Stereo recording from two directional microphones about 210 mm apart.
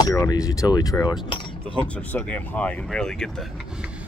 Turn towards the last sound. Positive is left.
turn(degrees=0)  # may be behind; listen again after turning